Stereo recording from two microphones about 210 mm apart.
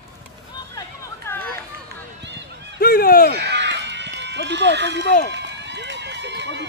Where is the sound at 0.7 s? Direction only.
15° left (ahead or behind).